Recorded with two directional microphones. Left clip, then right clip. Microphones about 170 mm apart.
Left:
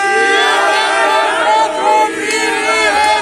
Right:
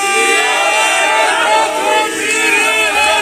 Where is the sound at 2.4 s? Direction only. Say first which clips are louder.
Right 1 dB; 30° right (ahead or behind).